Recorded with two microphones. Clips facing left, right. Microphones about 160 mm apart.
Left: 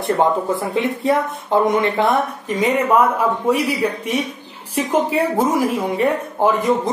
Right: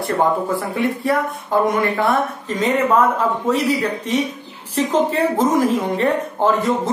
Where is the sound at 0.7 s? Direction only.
20° left (ahead or behind).